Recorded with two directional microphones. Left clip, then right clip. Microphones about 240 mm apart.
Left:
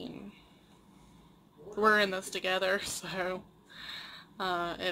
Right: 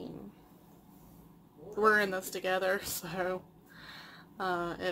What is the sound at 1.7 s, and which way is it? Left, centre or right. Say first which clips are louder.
Speech: left 1 dB; centre.